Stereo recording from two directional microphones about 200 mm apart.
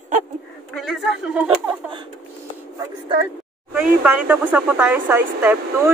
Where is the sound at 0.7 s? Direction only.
Centre (ahead or behind).